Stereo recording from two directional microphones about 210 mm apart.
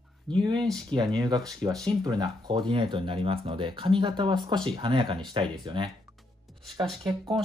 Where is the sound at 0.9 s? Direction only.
20° right (ahead or behind).